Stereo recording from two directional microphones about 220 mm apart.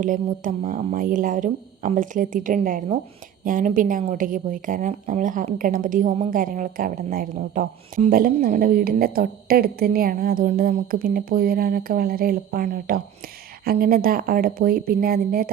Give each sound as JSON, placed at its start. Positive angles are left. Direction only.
{"t": 0.0, "sound": "a woman's voice", "side_deg": -35}